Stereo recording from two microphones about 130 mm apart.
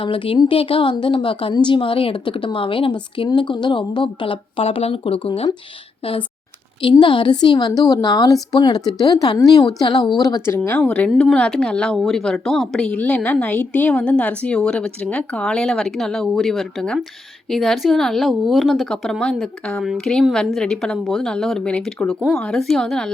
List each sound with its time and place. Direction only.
0.0 s a woman's voice: 40° left (ahead or behind)
7.0 s a woman's voice: 40° left (ahead or behind)
10.2 s speech: 20° left (ahead or behind)
10.7 s a woman's voice: 10° left (ahead or behind)